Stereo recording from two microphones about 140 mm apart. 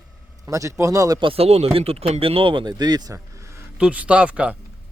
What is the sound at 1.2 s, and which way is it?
Speech, 40° right (ahead or behind).